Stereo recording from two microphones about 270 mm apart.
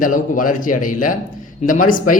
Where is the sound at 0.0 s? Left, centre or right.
Left.